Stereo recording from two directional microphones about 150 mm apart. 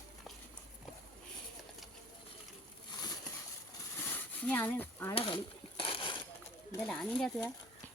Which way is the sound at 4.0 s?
15° left (ahead or behind).